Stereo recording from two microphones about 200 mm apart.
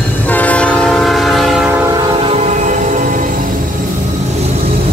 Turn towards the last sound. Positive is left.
turn(degrees=-40)  # may be behind; listen again after turning